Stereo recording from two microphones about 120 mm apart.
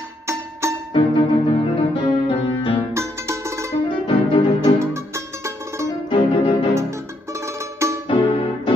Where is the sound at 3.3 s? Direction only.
25° right (ahead or behind).